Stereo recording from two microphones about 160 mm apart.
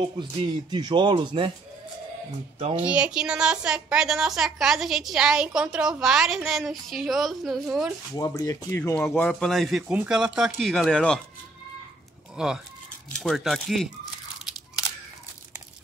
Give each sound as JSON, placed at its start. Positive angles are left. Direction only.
{"t": 0.2, "sound": "speech", "side_deg": -30}
{"t": 2.7, "sound": "a woman's voice", "side_deg": -10}
{"t": 8.1, "sound": "speech", "side_deg": 20}
{"t": 8.9, "sound": "a woman's voice", "side_deg": 10}
{"t": 12.4, "sound": "a woman's voice", "side_deg": -5}